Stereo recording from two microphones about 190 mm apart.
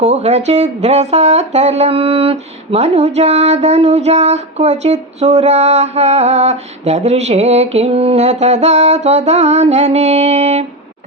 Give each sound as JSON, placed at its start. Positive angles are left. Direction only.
{"t": 0.0, "sound": "speech", "side_deg": -35}